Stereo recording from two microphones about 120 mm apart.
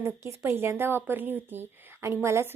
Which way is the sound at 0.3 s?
20° right (ahead or behind).